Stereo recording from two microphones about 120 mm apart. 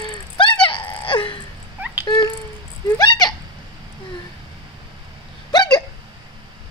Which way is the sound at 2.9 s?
35° left (ahead or behind).